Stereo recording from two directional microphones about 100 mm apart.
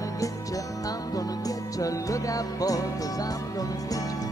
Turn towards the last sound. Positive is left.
turn(degrees=35)  # may be behind; listen again after turning